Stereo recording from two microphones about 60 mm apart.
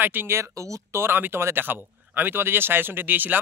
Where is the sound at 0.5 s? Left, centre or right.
Right.